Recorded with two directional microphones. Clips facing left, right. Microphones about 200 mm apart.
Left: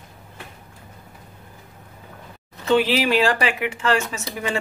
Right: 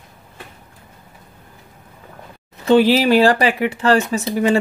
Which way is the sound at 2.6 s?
35° right (ahead or behind).